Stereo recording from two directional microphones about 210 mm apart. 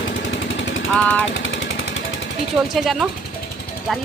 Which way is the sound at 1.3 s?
65° left (ahead or behind).